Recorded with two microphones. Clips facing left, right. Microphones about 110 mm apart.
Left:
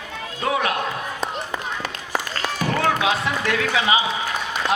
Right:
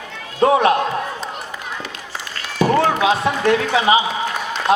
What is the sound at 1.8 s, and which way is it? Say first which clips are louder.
Run: left 4 dB; 45° left (ahead or behind).